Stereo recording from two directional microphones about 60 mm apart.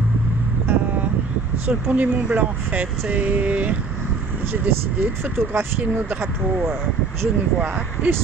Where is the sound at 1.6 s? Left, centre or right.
Right.